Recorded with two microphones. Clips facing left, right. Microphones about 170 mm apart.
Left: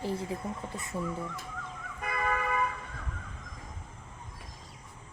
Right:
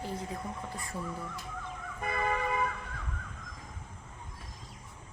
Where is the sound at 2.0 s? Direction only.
25° right (ahead or behind).